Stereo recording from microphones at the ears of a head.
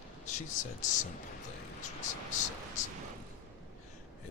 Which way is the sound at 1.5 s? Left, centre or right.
Left.